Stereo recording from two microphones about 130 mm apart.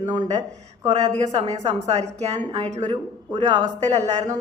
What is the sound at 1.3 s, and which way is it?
Speech, 60° right (ahead or behind).